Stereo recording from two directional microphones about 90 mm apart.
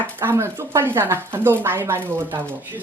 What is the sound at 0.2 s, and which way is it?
Speech, 25° right (ahead or behind).